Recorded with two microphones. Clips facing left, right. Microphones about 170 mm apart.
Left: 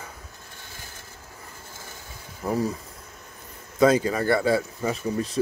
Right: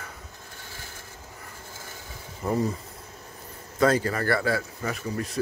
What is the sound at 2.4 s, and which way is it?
Speech, 5° left (ahead or behind).